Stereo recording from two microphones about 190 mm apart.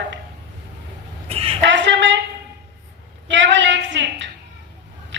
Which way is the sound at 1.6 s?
70° right (ahead or behind).